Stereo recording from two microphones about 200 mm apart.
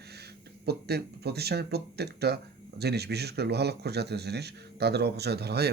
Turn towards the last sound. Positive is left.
turn(degrees=-55)  # may be behind; listen again after turning